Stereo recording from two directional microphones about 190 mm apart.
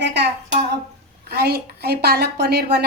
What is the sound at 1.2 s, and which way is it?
A woman's voice, 55° right (ahead or behind).